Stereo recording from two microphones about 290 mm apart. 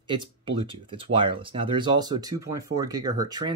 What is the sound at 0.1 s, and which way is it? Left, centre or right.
Speech, centre.